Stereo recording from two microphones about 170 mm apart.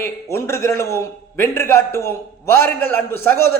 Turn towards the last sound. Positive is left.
turn(degrees=15)  # may be behind; listen again after turning